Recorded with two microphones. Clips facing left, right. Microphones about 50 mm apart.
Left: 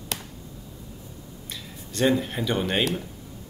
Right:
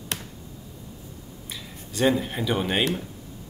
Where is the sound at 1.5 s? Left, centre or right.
Centre.